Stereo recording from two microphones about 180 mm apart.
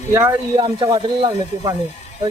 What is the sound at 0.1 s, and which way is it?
Speech, 10° right (ahead or behind).